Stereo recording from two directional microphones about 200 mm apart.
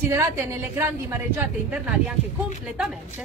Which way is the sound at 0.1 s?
15° right (ahead or behind).